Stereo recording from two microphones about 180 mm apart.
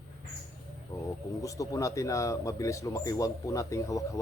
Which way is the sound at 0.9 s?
20° left (ahead or behind).